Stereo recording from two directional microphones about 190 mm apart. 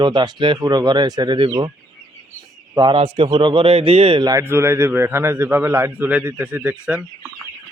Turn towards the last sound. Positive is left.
turn(degrees=-5)  # may be behind; listen again after turning